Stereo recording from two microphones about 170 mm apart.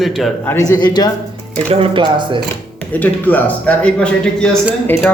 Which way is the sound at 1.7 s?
30° right (ahead or behind).